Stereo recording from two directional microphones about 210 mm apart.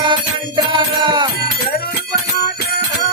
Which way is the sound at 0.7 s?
20° right (ahead or behind).